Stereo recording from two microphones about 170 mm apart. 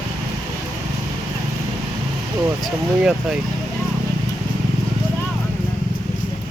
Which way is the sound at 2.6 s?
5° right (ahead or behind).